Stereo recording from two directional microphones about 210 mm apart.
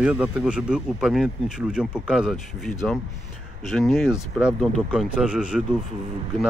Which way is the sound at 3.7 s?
Centre (ahead or behind).